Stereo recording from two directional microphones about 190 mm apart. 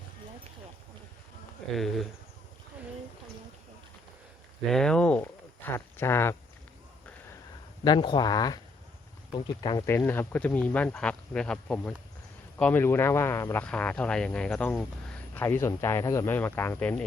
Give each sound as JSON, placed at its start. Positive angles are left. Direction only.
{"t": 1.7, "sound": "speech", "side_deg": 0}
{"t": 4.7, "sound": "speech", "side_deg": 5}
{"t": 7.9, "sound": "speech", "side_deg": 25}